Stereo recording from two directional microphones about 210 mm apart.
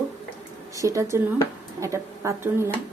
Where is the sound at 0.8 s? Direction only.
15° right (ahead or behind).